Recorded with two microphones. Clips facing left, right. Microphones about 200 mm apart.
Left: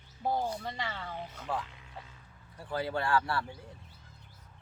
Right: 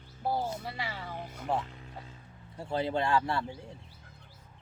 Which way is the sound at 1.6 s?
40° right (ahead or behind).